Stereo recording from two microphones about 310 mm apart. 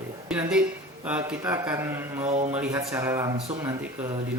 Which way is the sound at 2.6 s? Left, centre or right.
Centre.